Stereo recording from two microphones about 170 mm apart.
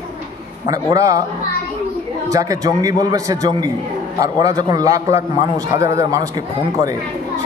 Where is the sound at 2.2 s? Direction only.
20° right (ahead or behind).